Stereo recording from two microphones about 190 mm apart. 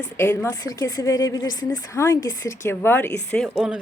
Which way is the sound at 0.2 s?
15° left (ahead or behind).